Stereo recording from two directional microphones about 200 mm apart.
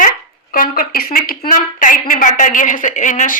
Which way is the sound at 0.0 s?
45° left (ahead or behind).